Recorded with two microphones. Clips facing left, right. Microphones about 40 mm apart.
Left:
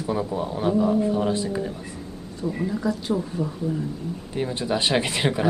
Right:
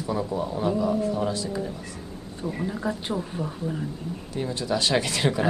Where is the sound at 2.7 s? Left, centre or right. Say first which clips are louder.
Left 3 dB; right.